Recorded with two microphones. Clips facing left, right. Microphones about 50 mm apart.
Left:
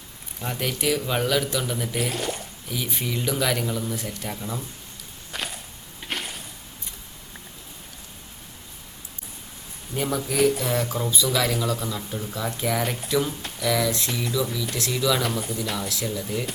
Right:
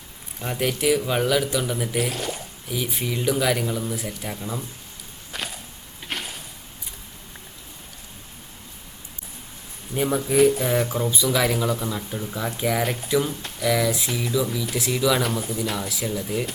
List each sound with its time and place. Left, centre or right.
0.3 s speech: centre
5.3 s a sound: centre
9.9 s speech: centre